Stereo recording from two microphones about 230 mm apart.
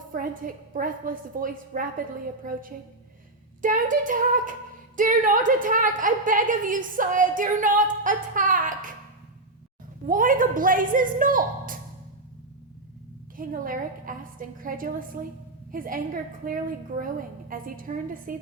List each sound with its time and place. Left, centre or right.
0.1 s a woman's voice: right
10.1 s a woman's voice: right
13.3 s a woman's voice: right